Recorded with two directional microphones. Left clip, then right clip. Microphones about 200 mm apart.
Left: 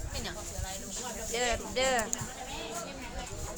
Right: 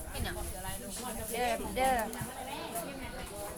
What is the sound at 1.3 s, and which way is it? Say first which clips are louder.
Speech: left 2 dB; 25° left (ahead or behind).